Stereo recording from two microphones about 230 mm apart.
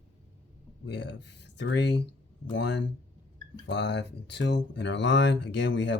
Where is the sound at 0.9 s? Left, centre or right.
Left.